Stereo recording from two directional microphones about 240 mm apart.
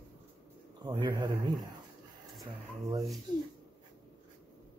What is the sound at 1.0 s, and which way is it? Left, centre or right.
Speech, centre.